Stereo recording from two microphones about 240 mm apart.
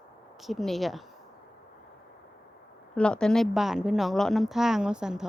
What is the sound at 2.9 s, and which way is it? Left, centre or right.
A woman's voice, centre.